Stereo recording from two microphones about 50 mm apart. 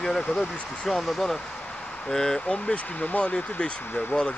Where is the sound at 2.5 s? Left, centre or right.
Left.